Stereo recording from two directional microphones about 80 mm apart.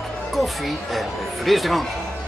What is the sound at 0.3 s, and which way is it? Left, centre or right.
A man's voice, centre.